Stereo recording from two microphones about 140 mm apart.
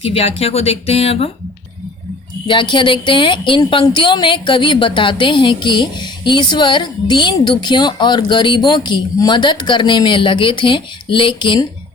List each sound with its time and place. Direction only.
0.0 s speech: 45° left (ahead or behind)
2.5 s a woman's voice: 35° left (ahead or behind)